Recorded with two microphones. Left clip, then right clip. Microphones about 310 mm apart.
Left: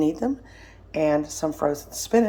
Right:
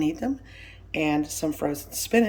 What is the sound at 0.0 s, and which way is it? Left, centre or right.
Speech, left.